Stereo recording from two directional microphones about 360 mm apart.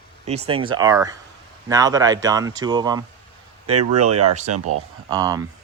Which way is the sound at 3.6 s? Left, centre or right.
Right.